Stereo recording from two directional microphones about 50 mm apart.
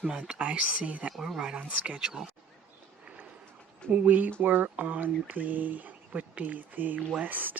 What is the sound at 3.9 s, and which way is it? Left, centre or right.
Speech, right.